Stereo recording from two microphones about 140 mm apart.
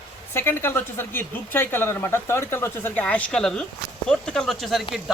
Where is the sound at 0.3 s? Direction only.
15° left (ahead or behind).